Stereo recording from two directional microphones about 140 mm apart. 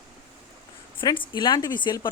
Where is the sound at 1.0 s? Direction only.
35° left (ahead or behind).